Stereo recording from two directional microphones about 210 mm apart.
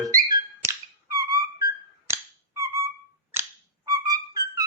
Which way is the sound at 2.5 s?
15° right (ahead or behind).